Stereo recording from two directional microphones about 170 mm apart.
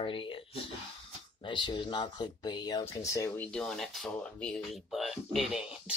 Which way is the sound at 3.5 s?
5° left (ahead or behind).